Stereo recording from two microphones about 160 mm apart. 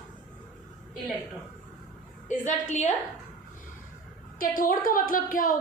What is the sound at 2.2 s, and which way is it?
Speech, 50° left (ahead or behind).